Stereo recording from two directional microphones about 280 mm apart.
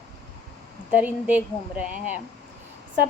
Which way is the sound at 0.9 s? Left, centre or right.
Centre.